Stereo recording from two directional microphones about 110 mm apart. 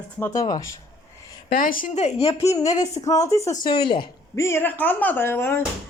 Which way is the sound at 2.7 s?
90° left.